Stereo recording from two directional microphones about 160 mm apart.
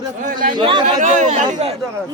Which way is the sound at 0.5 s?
30° right (ahead or behind).